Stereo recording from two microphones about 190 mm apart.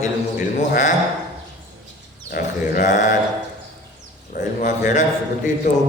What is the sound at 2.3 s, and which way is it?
Mantra, 45° left (ahead or behind).